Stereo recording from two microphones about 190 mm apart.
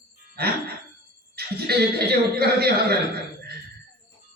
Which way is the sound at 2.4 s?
55° right (ahead or behind).